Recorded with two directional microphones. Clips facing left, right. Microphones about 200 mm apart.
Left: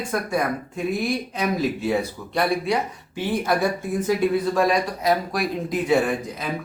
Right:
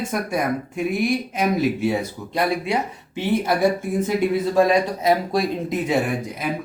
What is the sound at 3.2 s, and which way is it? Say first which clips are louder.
Speech: right 3 dB; 25° right (ahead or behind).